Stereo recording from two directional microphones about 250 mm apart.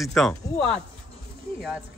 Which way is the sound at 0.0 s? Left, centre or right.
Centre.